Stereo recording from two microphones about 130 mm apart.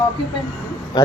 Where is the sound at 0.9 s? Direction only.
30° left (ahead or behind).